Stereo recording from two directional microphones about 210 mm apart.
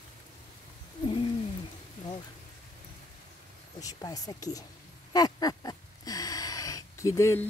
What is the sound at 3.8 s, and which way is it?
Speech, 15° left (ahead or behind).